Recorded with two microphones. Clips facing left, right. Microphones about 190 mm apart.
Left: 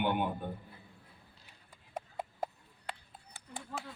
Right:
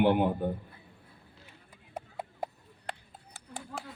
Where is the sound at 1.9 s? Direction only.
10° right (ahead or behind).